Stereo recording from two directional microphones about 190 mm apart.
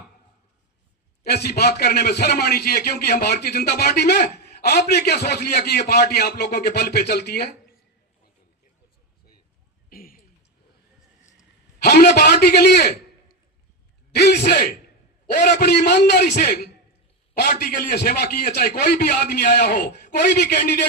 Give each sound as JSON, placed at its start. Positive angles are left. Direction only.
{"t": 1.2, "sound": "a man's voice", "side_deg": 55}
{"t": 9.9, "sound": "a sound", "side_deg": 50}
{"t": 11.8, "sound": "a man's voice", "side_deg": 55}
{"t": 14.1, "sound": "a man's voice", "side_deg": 60}
{"t": 16.3, "sound": "a man's voice", "side_deg": 40}